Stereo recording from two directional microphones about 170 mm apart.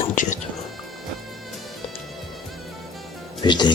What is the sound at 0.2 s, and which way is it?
Music, 50° left (ahead or behind).